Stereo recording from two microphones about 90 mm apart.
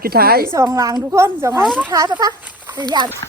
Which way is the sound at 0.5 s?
30° right (ahead or behind).